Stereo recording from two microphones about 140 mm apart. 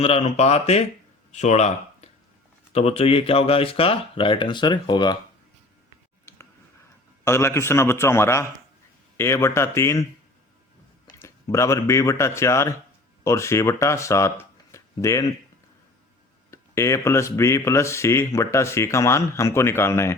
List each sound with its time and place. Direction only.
0.0 s speech: 50° left (ahead or behind); by 5.1 s 30° left (ahead or behind)
7.3 s a man's voice: 20° left (ahead or behind)
11.2 s speech: 20° left (ahead or behind)
16.5 s speech: 20° left (ahead or behind)